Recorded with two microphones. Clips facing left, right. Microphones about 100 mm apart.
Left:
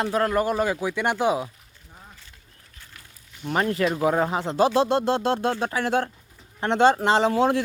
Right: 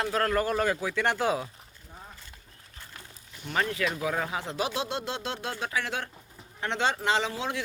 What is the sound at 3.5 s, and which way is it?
Speech, 35° left (ahead or behind).